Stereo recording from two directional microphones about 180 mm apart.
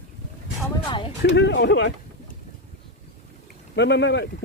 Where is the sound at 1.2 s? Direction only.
75° left (ahead or behind).